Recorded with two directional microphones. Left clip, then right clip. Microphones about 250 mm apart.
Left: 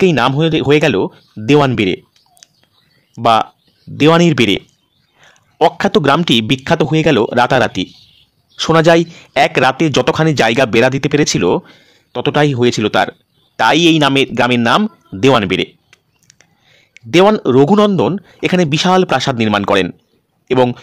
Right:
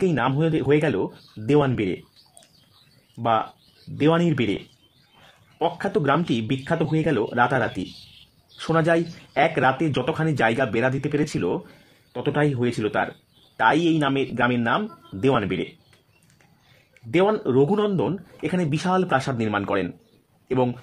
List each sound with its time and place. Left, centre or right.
0.0 s speech: left
3.2 s speech: left
5.6 s a man's voice: left